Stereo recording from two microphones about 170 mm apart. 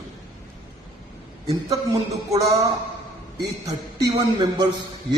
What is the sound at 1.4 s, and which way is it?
Speech, 20° right (ahead or behind).